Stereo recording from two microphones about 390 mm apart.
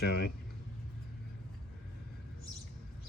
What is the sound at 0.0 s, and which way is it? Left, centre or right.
Speech, left.